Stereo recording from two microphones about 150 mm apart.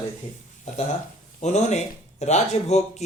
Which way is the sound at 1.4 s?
50° left (ahead or behind).